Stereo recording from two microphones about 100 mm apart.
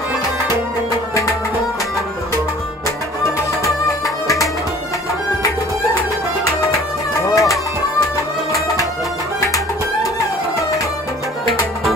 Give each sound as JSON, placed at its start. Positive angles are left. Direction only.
{"t": 7.2, "sound": "music", "side_deg": 35}